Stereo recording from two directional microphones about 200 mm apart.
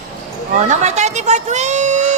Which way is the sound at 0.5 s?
35° right (ahead or behind).